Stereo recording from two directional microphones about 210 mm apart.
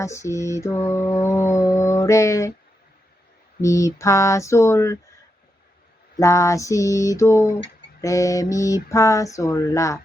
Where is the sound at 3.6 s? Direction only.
15° left (ahead or behind).